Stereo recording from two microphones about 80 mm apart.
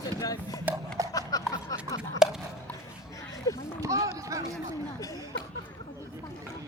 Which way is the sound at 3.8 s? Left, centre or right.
Right.